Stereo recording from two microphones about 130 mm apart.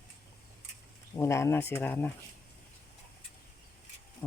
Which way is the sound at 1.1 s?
20° left (ahead or behind).